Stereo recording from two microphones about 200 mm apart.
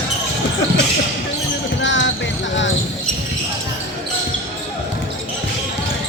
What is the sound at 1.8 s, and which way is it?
Basketball bounce, 65° left (ahead or behind).